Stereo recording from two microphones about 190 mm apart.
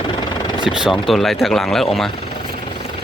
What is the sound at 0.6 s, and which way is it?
Speech, 5° right (ahead or behind).